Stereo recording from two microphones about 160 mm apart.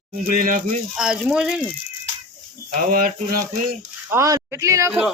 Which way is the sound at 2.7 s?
65° right (ahead or behind).